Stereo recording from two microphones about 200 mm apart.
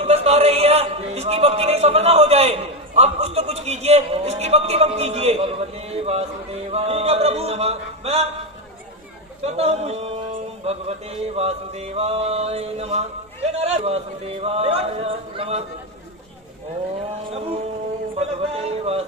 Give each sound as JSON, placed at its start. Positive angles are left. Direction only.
{"t": 0.0, "sound": "a man's voice", "side_deg": -30}
{"t": 9.4, "sound": "mantra", "side_deg": -30}
{"t": 14.4, "sound": "speech", "side_deg": -30}
{"t": 17.3, "sound": "a man's voice", "side_deg": -30}